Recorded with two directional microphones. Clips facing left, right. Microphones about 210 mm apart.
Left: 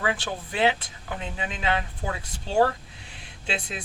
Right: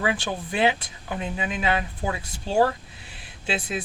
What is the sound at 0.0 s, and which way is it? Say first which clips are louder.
Speech: right 2 dB; 15° right (ahead or behind).